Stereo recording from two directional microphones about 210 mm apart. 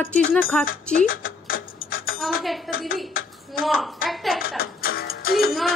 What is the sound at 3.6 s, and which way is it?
Speech, centre (ahead or behind).